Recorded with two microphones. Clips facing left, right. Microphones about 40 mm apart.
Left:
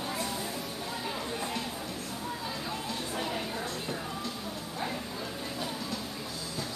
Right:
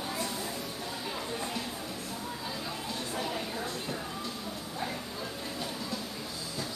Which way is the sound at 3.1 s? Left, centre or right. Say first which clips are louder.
Even; centre.